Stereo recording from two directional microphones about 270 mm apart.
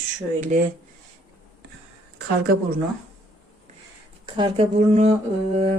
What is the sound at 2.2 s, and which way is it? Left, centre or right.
Speech, right.